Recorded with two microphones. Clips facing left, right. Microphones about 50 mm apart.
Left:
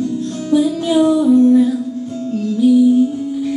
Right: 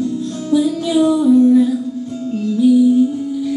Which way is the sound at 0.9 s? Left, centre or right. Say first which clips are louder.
Left 1 dB; centre.